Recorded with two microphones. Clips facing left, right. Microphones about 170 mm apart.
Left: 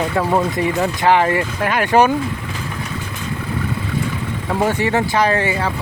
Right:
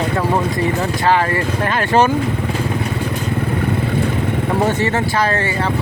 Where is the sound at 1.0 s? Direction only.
15° left (ahead or behind).